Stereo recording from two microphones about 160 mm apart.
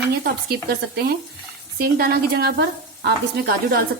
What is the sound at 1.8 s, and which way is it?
Speech, 70° right (ahead or behind).